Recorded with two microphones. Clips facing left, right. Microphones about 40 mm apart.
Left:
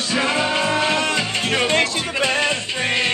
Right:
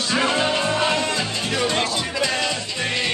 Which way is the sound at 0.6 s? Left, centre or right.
Left.